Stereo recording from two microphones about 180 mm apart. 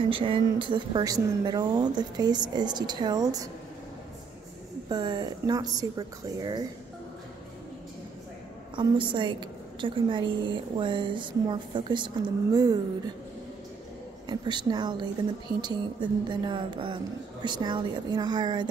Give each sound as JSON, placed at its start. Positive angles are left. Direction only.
{"t": 0.1, "sound": "a woman's voice", "side_deg": -30}
{"t": 4.8, "sound": "a woman's voice", "side_deg": -20}
{"t": 8.7, "sound": "a woman's voice", "side_deg": -25}
{"t": 14.2, "sound": "a woman's voice", "side_deg": -25}